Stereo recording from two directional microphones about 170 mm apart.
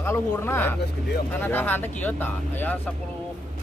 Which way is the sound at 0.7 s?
70° left (ahead or behind).